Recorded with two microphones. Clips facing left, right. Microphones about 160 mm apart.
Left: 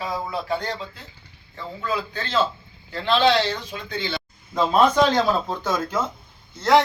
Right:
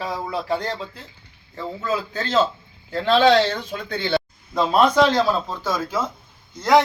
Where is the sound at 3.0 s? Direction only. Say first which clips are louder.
Right 3 dB; 45° right (ahead or behind).